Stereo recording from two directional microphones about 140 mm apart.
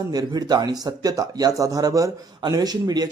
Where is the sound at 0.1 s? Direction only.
30° right (ahead or behind).